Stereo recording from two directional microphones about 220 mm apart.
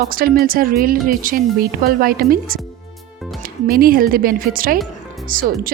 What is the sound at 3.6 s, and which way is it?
Speech, 40° right (ahead or behind).